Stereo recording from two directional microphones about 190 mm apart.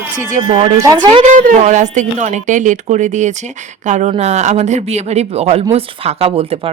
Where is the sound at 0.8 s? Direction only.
20° right (ahead or behind).